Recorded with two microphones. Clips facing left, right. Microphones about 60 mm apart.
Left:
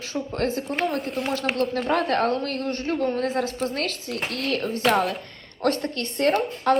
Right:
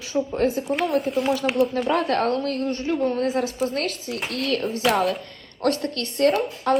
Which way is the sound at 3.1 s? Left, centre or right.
Centre.